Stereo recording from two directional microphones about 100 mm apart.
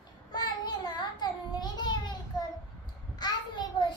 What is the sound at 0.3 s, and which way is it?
Child singing, 45° left (ahead or behind).